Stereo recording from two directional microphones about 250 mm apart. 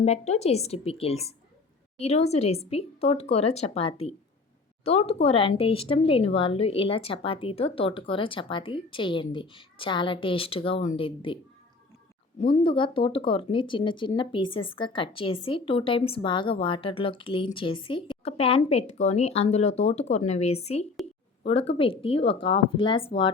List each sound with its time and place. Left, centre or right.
0.0 s speech: left
12.4 s speech: left